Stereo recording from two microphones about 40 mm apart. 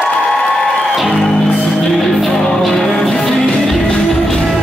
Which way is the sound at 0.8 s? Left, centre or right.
Centre.